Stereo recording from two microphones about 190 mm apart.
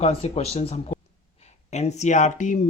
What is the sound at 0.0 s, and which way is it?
Speech, 30° left (ahead or behind).